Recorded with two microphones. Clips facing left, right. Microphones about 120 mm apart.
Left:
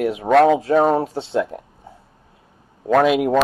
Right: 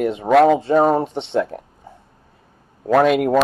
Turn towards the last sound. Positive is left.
turn(degrees=5)  # may be behind; listen again after turning